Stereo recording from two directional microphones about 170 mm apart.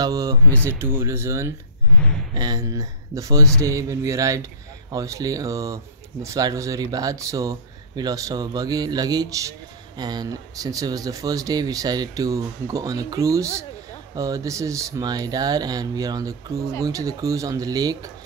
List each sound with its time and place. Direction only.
0.0 s speech: 20° right (ahead or behind)